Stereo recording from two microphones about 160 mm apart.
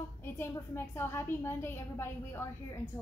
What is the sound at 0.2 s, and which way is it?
A woman's voice, 15° left (ahead or behind).